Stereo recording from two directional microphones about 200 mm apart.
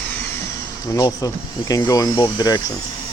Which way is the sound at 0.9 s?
15° left (ahead or behind).